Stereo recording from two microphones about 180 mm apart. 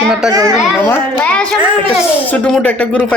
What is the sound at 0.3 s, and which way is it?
Speech, 20° right (ahead or behind).